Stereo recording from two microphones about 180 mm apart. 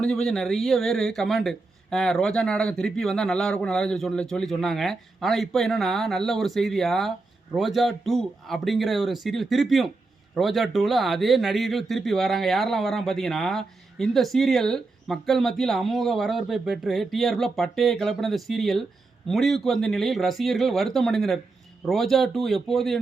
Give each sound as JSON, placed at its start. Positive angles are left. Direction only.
{"t": 0.0, "sound": "speech", "side_deg": 5}